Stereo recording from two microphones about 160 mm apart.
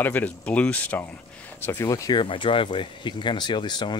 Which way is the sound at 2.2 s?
30° left (ahead or behind).